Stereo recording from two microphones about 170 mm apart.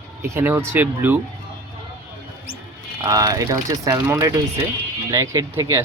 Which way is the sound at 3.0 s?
20° right (ahead or behind).